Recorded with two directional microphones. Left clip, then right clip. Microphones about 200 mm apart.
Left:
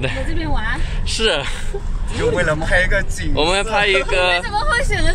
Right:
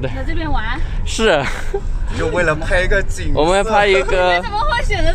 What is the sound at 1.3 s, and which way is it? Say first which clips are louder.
Speech: right 5 dB; 30° right (ahead or behind).